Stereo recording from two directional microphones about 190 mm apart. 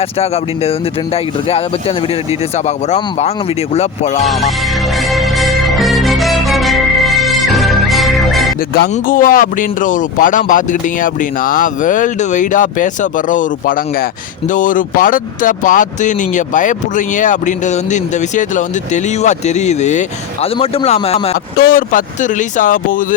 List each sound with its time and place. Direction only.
0.0 s speech: 35° left (ahead or behind)
4.3 s music: centre (ahead or behind)
8.9 s speech: 45° left (ahead or behind)
21.3 s speech: 50° left (ahead or behind)